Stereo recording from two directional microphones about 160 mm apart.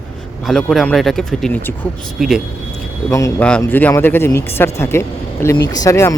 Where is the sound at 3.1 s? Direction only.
20° left (ahead or behind).